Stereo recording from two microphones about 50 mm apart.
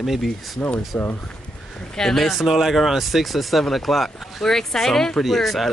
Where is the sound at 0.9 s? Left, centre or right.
Left.